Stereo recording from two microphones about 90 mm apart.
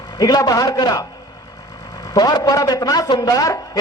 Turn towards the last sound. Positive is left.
turn(degrees=40)  # may be behind; listen again after turning